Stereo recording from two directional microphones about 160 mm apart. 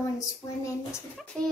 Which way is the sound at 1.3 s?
5° left (ahead or behind).